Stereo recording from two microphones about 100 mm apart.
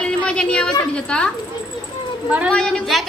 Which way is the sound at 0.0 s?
10° left (ahead or behind).